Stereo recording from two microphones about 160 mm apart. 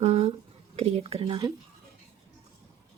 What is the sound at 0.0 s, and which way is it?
Speech, 40° right (ahead or behind).